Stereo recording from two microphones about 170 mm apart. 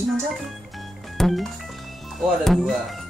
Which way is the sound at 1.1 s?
Centre (ahead or behind).